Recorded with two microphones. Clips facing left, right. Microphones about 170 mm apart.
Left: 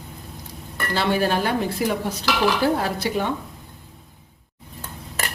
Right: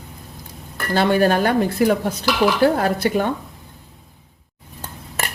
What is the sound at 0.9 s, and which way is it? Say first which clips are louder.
Speech: right 5 dB; 50° right (ahead or behind).